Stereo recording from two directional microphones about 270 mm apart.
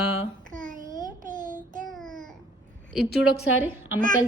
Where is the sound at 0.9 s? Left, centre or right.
Centre.